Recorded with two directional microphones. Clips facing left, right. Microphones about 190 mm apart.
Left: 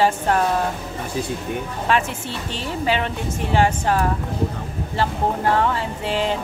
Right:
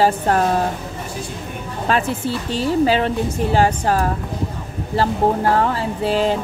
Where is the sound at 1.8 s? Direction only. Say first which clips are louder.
Right 3 dB; 35° right (ahead or behind).